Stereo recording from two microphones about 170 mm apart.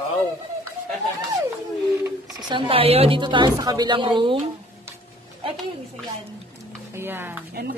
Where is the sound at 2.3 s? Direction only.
30° right (ahead or behind).